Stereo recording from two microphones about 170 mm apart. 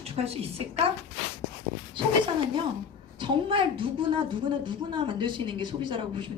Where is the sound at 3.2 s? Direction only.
30° right (ahead or behind).